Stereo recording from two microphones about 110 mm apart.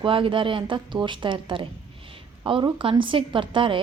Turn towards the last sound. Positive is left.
turn(degrees=-50)  # may be behind; listen again after turning